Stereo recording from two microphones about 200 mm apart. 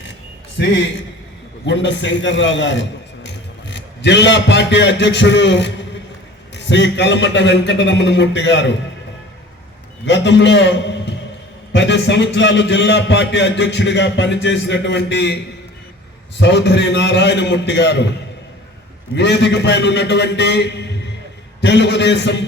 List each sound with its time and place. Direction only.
0.6 s a man's voice: 60° left (ahead or behind)
10.1 s a man's voice: 60° left (ahead or behind)
16.4 s a man's voice: 60° left (ahead or behind)
19.1 s a man's voice: 60° left (ahead or behind)